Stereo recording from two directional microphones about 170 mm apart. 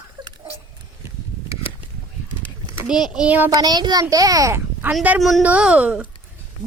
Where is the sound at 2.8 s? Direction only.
5° right (ahead or behind).